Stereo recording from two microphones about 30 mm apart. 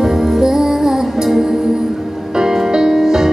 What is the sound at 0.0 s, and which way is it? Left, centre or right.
Music, centre.